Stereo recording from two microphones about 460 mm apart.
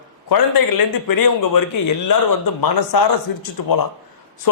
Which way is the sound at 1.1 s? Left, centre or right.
Left.